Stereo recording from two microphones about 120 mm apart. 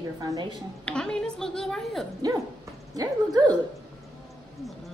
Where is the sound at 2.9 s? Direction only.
35° right (ahead or behind).